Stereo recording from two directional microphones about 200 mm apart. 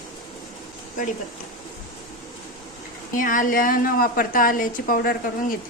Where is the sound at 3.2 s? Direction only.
40° left (ahead or behind).